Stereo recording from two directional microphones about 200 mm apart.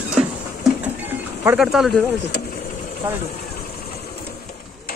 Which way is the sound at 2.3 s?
55° left (ahead or behind).